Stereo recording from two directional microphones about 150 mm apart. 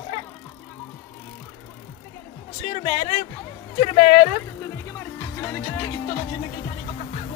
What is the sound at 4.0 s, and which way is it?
Speech, 70° left (ahead or behind).